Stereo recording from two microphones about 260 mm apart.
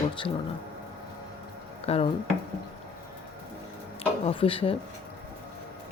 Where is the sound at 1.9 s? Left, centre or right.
Left.